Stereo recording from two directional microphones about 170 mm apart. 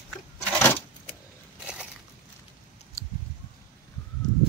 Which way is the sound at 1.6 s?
5° right (ahead or behind).